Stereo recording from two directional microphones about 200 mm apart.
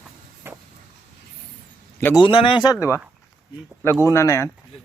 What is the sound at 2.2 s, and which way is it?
Speech, 25° left (ahead or behind).